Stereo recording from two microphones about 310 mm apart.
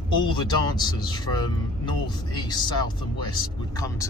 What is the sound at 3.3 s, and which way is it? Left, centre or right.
Speech, centre.